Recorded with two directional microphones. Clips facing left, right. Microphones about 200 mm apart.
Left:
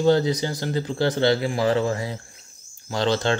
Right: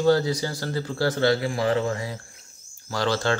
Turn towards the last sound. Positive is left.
turn(degrees=20)  # may be behind; listen again after turning